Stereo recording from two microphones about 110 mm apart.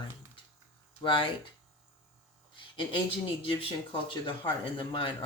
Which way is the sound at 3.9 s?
50° left (ahead or behind).